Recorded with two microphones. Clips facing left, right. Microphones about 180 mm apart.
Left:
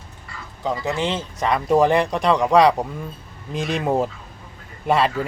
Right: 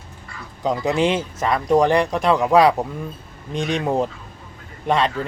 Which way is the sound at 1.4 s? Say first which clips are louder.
Left 1 dB; centre (ahead or behind).